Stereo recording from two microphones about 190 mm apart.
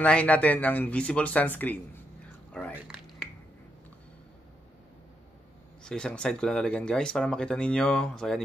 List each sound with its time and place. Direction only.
0.0 s speech: 5° left (ahead or behind)
2.5 s a sound: 5° left (ahead or behind)
5.9 s speech: 5° left (ahead or behind)